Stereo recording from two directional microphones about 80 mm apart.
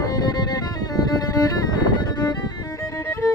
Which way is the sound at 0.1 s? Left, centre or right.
Left.